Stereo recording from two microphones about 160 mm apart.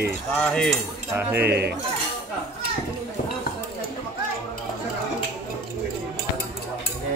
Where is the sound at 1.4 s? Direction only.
85° right.